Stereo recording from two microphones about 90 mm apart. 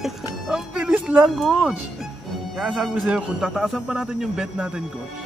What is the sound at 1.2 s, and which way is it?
Speech, centre (ahead or behind).